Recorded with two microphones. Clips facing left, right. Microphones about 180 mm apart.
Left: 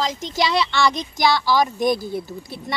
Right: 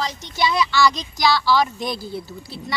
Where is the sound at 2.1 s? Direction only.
50° left (ahead or behind).